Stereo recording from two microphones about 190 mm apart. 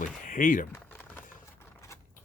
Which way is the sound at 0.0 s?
45° left (ahead or behind).